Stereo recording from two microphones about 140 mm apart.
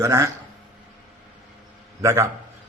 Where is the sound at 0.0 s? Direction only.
20° right (ahead or behind).